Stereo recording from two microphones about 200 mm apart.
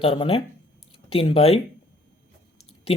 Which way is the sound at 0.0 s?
25° left (ahead or behind).